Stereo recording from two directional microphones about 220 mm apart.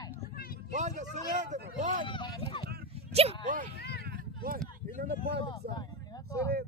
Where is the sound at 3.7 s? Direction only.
45° left (ahead or behind).